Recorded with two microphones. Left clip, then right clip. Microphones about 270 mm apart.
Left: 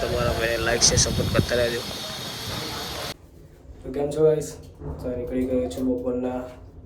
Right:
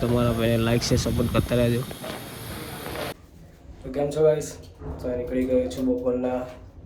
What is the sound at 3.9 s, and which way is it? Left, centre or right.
Speech, centre.